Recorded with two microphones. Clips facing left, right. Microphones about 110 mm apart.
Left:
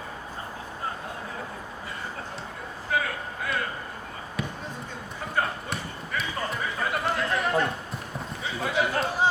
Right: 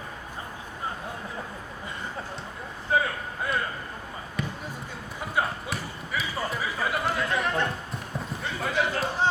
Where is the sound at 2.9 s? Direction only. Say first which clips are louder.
Right 3 dB; 30° right (ahead or behind).